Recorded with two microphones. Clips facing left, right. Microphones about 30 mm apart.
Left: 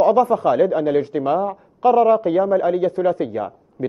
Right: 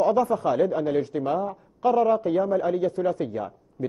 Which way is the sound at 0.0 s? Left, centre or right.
Left.